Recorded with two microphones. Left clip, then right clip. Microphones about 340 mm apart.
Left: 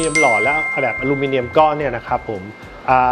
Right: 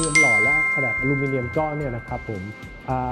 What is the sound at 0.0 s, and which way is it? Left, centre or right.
Music, centre.